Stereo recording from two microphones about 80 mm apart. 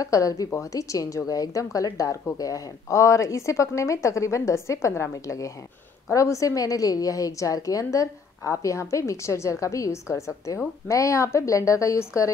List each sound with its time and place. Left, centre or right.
0.0 s a woman's voice: left